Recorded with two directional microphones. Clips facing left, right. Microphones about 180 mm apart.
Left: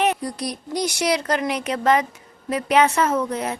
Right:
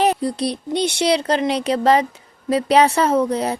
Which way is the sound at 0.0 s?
30° right (ahead or behind).